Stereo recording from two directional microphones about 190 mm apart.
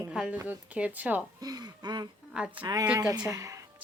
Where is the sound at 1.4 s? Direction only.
20° right (ahead or behind).